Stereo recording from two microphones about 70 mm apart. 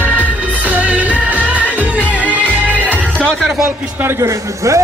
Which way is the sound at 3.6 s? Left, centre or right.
Right.